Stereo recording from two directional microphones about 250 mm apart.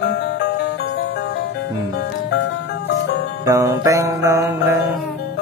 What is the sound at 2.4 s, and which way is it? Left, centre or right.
Music, left.